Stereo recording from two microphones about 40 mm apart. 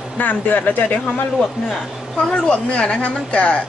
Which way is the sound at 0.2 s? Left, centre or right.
Left.